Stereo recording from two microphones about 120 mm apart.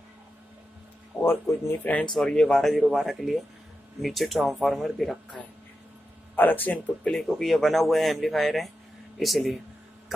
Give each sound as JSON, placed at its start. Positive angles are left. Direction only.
{"t": 1.2, "sound": "speech", "side_deg": 20}
{"t": 2.1, "sound": "speech", "side_deg": 5}
{"t": 6.3, "sound": "speech", "side_deg": 15}
{"t": 7.2, "sound": "speech", "side_deg": 0}